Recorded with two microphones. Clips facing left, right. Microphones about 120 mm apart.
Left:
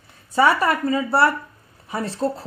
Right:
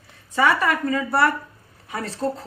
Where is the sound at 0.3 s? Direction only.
35° left (ahead or behind).